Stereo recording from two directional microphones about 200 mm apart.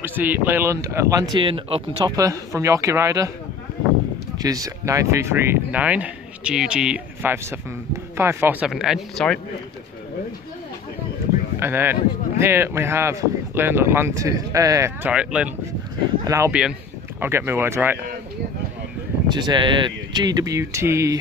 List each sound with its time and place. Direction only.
0.0 s speech: 10° right (ahead or behind)
4.4 s speech: 15° right (ahead or behind); by 9.4 s 5° left (ahead or behind)
11.6 s speech: 10° right (ahead or behind)
15.0 s speech: 5° right (ahead or behind)
19.2 s speech: 20° right (ahead or behind)